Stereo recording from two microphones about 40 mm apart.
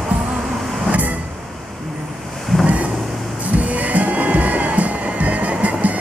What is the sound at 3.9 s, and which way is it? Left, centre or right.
Music, right.